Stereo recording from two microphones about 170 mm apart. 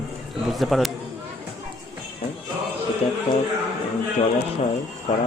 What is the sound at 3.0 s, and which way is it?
Music, 40° left (ahead or behind).